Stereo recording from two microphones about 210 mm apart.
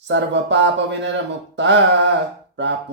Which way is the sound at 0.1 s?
55° right (ahead or behind).